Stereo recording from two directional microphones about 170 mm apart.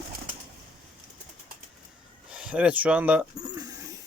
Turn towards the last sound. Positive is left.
turn(degrees=-20)  # may be behind; listen again after turning